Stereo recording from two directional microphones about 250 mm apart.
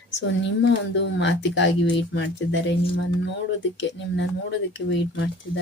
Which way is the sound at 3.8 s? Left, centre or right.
Left.